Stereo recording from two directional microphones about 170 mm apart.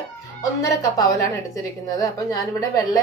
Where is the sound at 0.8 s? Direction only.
20° left (ahead or behind).